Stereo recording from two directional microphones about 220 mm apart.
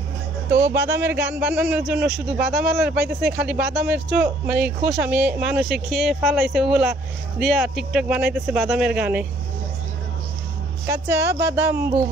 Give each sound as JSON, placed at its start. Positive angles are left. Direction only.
{"t": 0.7, "sound": "speech", "side_deg": -10}
{"t": 10.9, "sound": "speech", "side_deg": -10}